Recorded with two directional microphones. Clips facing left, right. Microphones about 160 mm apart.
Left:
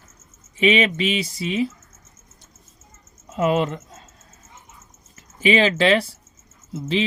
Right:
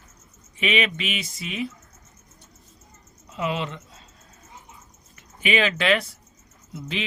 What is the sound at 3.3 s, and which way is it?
Speech, 45° left (ahead or behind).